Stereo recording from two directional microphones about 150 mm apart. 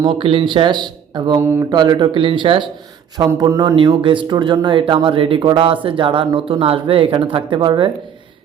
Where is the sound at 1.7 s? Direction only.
30° right (ahead or behind).